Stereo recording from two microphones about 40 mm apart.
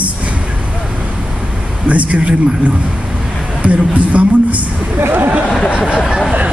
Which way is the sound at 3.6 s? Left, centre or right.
Right.